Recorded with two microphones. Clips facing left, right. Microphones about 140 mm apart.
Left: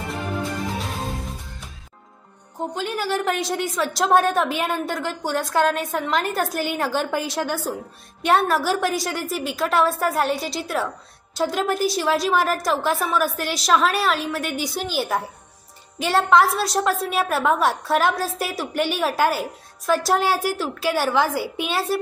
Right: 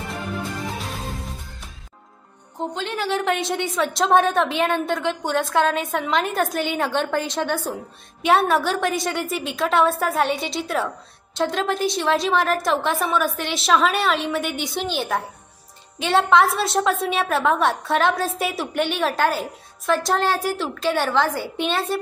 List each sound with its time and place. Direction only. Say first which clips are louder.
2.7 s a woman's voice: even; 5° left (ahead or behind)